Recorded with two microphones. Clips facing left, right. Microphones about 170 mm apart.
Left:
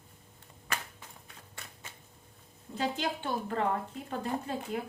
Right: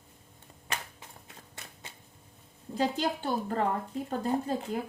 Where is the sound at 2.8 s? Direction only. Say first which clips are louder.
Right 4 dB; 40° right (ahead or behind).